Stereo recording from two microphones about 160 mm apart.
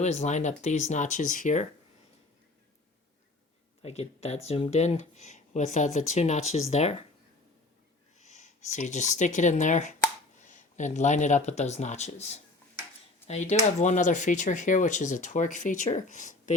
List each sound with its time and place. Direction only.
0.0 s speech: 45° left (ahead or behind)
3.8 s speech: 40° left (ahead or behind)
8.2 s speech: 50° left (ahead or behind)